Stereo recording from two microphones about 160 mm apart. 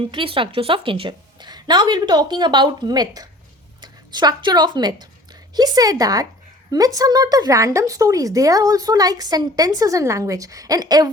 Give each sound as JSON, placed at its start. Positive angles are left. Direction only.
{"t": 0.1, "sound": "a woman's voice", "side_deg": -35}